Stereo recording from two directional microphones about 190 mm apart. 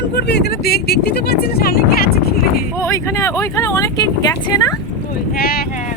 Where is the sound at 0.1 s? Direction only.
60° left (ahead or behind).